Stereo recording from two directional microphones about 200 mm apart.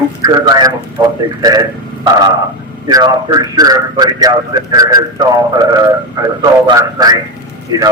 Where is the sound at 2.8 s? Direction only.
20° right (ahead or behind).